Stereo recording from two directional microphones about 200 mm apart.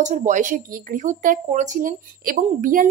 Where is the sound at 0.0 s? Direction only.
40° right (ahead or behind).